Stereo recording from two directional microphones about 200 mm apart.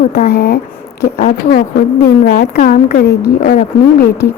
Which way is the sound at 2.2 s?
50° left (ahead or behind).